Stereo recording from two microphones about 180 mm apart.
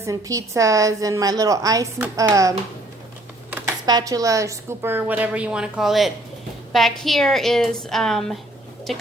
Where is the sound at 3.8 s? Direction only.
20° right (ahead or behind).